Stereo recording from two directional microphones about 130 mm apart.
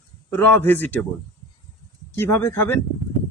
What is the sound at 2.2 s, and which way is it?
Speech, 20° left (ahead or behind).